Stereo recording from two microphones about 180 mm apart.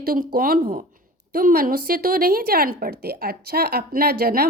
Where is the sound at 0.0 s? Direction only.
55° right (ahead or behind).